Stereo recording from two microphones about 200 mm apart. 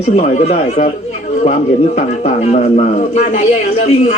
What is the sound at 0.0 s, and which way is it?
Speech, 35° left (ahead or behind).